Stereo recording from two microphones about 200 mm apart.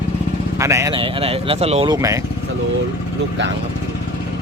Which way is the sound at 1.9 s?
15° right (ahead or behind).